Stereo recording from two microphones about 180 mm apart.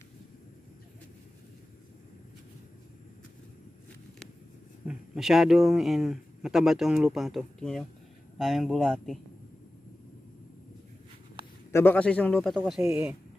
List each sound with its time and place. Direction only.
4.9 s speech: centre (ahead or behind)
11.7 s speech: 10° left (ahead or behind); by 13.1 s 15° right (ahead or behind)